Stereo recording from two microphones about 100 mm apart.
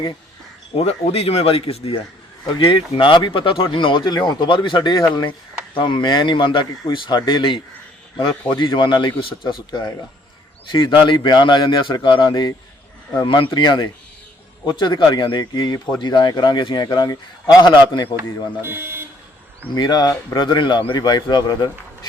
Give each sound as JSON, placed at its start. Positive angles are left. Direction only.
{"t": 0.8, "sound": "speech", "side_deg": 90}
{"t": 2.6, "sound": "a man's voice", "side_deg": 65}
{"t": 8.6, "sound": "a man's voice", "side_deg": 55}
{"t": 13.5, "sound": "a man's voice", "side_deg": 50}
{"t": 18.2, "sound": "speech", "side_deg": -20}
{"t": 19.7, "sound": "a man's voice", "side_deg": 45}